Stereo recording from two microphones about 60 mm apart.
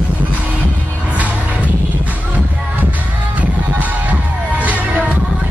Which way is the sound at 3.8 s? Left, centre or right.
Right.